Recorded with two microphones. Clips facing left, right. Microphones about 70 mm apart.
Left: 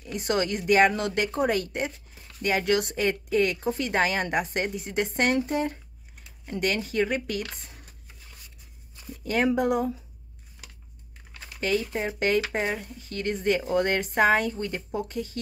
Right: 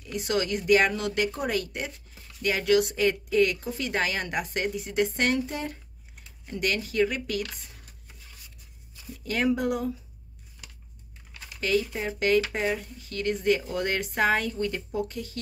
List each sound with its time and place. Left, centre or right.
0.0 s speech: left
9.2 s speech: left
11.3 s speech: left